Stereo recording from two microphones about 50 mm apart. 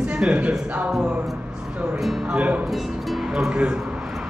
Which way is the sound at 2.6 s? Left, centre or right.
Centre.